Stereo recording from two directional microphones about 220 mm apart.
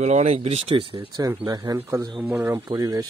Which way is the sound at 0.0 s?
30° right (ahead or behind).